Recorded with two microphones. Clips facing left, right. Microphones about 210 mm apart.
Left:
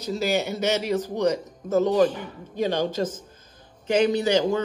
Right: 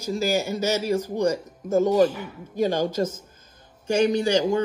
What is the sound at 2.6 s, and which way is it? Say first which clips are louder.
Speech: right 1 dB; 45° right (ahead or behind).